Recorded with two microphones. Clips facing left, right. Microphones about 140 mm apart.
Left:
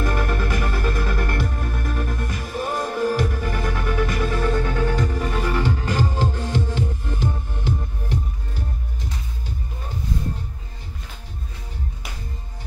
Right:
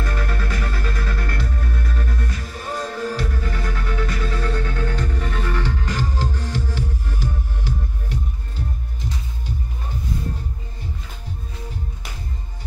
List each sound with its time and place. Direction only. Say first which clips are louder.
0.0 s music: left 4 dB; 15° left (ahead or behind)